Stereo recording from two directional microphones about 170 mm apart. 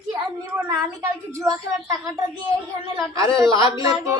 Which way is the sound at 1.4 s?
20° right (ahead or behind).